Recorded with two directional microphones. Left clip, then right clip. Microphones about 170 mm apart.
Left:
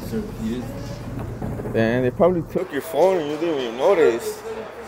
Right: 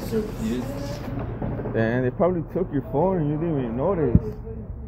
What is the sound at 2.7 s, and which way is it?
Speech, 75° left (ahead or behind).